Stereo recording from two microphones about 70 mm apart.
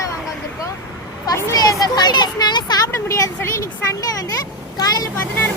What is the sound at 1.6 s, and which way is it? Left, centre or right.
Speech, left.